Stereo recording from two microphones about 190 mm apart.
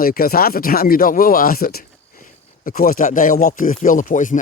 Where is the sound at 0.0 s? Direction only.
50° left (ahead or behind).